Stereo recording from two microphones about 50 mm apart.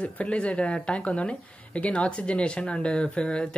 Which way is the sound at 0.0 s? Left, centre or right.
Left.